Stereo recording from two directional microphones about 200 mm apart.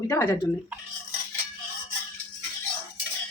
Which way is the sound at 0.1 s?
15° left (ahead or behind).